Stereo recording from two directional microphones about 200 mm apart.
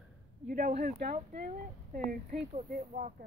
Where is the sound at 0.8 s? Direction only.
45° right (ahead or behind).